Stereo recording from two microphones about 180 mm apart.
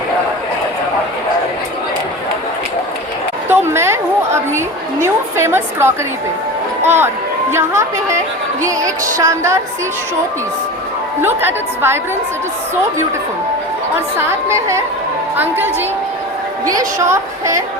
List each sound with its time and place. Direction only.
3.5 s a sound: 15° right (ahead or behind)
6.8 s a woman's voice: 15° right (ahead or behind)
11.2 s a woman's voice: 10° right (ahead or behind)
15.4 s a woman's voice: 10° right (ahead or behind)